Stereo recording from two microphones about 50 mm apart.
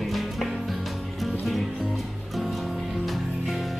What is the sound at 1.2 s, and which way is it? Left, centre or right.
Music, centre.